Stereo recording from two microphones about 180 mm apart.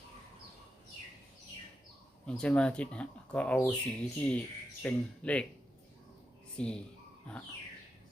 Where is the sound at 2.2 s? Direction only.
5° left (ahead or behind).